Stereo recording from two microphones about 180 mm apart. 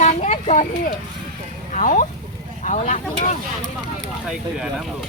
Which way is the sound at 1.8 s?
45° left (ahead or behind).